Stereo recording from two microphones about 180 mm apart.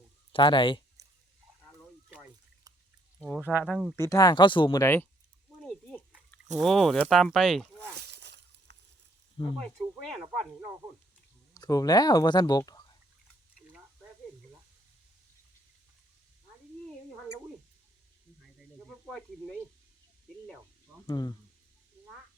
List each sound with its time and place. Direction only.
0.3 s speech: 25° left (ahead or behind)
1.0 s a sound: 20° right (ahead or behind)
3.2 s speech: 5° left (ahead or behind)
3.9 s speech: 15° left (ahead or behind)
6.6 s speech: centre (ahead or behind)
7.8 s a sound: 70° right (ahead or behind)
9.6 s speech: 5° left (ahead or behind)
11.5 s speech: 20° left (ahead or behind)
19.0 s speech: centre (ahead or behind)
21.1 s speech: 25° left (ahead or behind)